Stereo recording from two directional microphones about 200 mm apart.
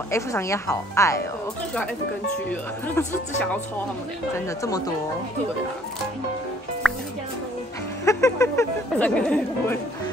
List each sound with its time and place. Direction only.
0.1 s speech: 15° left (ahead or behind)
4.6 s speech: 20° left (ahead or behind)
6.8 s music: centre (ahead or behind)
8.0 s speech: 15° left (ahead or behind)